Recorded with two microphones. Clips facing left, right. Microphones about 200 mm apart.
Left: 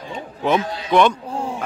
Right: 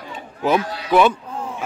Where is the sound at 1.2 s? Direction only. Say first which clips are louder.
Left 4 dB; 30° left (ahead or behind).